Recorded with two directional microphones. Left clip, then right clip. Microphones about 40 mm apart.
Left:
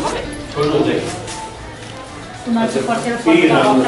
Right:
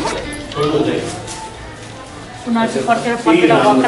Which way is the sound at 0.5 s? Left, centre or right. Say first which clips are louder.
Even; centre.